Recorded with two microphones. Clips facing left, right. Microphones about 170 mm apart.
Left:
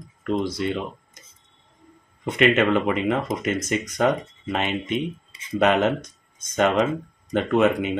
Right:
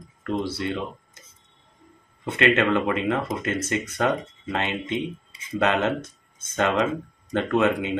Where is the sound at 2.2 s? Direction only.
15° left (ahead or behind).